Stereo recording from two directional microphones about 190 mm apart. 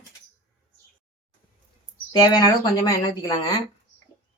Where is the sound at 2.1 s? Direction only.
20° left (ahead or behind).